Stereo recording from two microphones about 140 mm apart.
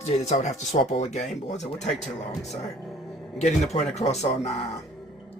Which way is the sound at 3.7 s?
50° left (ahead or behind).